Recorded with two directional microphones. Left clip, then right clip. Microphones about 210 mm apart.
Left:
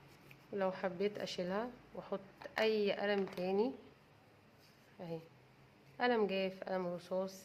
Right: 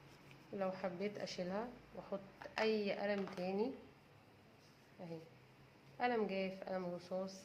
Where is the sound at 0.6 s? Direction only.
40° left (ahead or behind).